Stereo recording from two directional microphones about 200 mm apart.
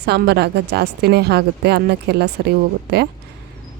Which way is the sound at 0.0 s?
55° right (ahead or behind).